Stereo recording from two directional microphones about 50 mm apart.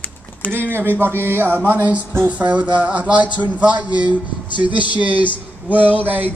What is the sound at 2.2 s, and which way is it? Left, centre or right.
Speech, right.